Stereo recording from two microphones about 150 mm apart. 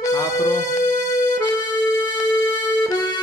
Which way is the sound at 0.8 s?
20° left (ahead or behind).